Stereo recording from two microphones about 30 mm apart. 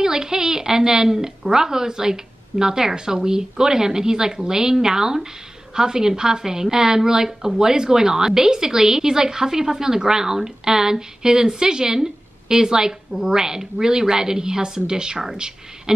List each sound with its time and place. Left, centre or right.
0.0 s a woman's voice: centre